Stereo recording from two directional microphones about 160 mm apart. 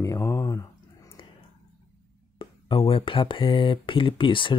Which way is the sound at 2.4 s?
35° left (ahead or behind).